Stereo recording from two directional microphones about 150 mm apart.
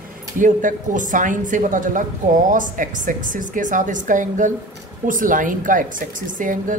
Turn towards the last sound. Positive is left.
turn(degrees=-60)  # may be behind; listen again after turning